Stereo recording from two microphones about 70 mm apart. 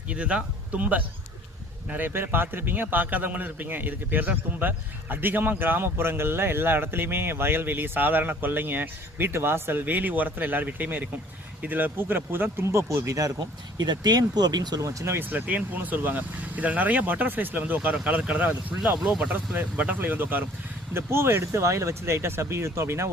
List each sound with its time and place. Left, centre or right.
0.1 s a man's voice: centre; by 13.3 s right
13.8 s speech: right
14.8 s speech: right
15.2 s a man's voice: right
18.9 s speech: centre
19.3 s a man's voice: right